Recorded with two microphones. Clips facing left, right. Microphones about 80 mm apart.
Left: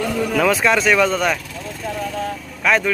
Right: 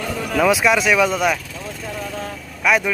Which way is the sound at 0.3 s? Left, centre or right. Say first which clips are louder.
Right 2 dB; centre.